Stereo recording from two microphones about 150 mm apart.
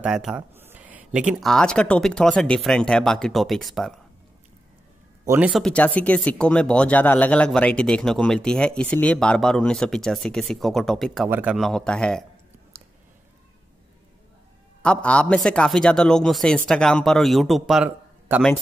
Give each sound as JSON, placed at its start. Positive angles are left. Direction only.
{"t": 0.0, "sound": "speech", "side_deg": -5}
{"t": 5.2, "sound": "speech", "side_deg": -15}
{"t": 5.5, "sound": "speech", "side_deg": 5}
{"t": 11.2, "sound": "speech", "side_deg": -10}
{"t": 14.8, "sound": "speech", "side_deg": 5}